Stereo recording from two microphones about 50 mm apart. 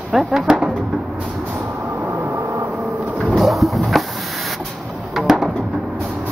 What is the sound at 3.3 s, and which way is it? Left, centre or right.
Music, centre.